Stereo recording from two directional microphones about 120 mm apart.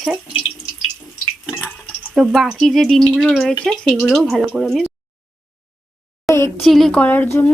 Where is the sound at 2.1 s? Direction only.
5° right (ahead or behind).